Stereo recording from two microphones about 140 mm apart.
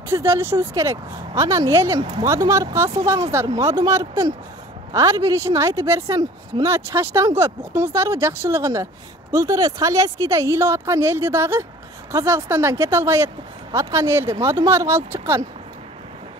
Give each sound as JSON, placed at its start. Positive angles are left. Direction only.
{"t": 0.1, "sound": "speech", "side_deg": -20}